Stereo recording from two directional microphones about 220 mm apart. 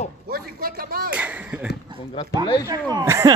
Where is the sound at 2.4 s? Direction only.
20° left (ahead or behind).